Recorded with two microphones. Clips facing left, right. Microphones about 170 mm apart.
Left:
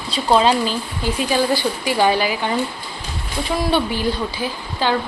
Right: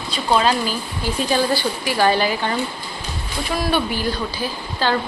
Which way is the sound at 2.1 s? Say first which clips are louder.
Even; 10° left (ahead or behind).